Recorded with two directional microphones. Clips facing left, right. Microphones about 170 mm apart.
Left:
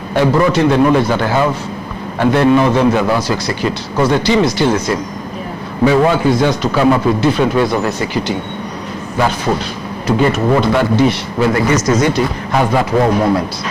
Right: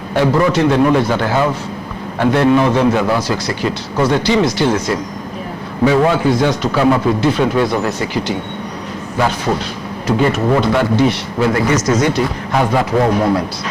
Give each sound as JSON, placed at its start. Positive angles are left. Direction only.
{"t": 0.2, "sound": "a man's voice", "side_deg": 20}
{"t": 9.1, "sound": "a man's voice", "side_deg": 20}